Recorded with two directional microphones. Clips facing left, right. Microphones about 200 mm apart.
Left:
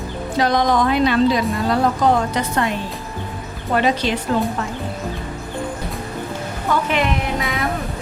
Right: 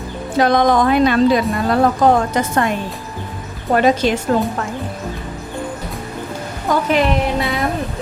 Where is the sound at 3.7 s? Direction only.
45° right (ahead or behind).